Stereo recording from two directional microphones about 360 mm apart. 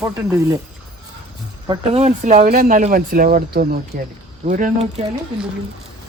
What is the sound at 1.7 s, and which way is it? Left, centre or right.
Speech, centre.